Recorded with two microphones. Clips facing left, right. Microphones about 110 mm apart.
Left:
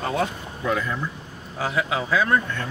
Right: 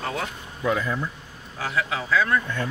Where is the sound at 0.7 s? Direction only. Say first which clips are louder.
Right 1 dB; 5° right (ahead or behind).